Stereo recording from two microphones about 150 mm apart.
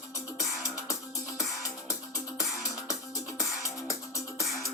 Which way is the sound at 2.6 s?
25° left (ahead or behind).